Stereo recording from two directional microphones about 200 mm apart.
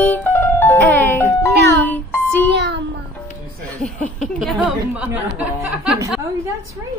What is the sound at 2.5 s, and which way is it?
Music, 60° right (ahead or behind).